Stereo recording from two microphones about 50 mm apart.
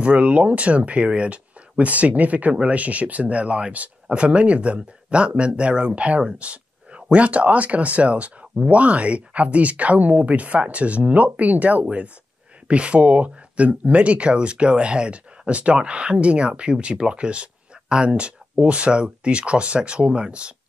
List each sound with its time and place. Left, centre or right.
0.0 s speech: right